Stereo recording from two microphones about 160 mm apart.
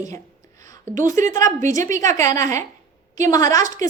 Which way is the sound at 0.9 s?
50° right (ahead or behind).